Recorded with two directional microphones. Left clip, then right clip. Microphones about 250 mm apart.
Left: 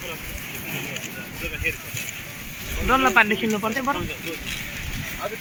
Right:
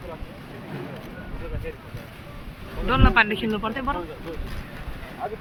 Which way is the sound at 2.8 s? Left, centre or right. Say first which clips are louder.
Left 2 dB; left.